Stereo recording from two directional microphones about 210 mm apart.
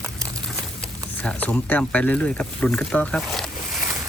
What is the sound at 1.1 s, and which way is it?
Speech, 5° left (ahead or behind).